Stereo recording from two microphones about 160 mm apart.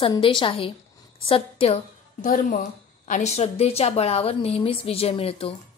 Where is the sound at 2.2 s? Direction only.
55° left (ahead or behind).